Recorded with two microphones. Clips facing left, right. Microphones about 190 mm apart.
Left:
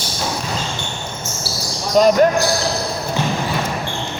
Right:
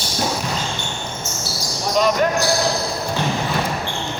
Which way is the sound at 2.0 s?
40° left (ahead or behind).